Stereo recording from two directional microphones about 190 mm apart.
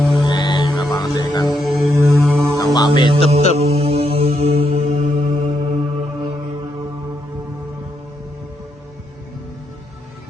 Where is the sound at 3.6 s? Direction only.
30° right (ahead or behind).